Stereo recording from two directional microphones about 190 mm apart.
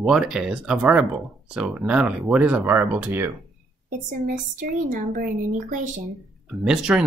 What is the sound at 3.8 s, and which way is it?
A woman's voice, 45° right (ahead or behind).